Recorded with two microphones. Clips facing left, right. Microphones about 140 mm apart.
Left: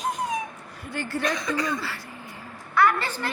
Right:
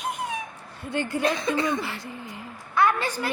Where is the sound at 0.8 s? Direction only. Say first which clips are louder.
Right 3 dB; 20° right (ahead or behind).